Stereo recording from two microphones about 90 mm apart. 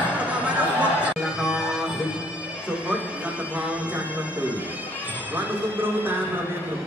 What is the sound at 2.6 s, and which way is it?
Bagpipes, 15° right (ahead or behind).